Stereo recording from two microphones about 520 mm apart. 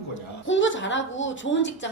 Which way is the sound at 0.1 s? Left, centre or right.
Left.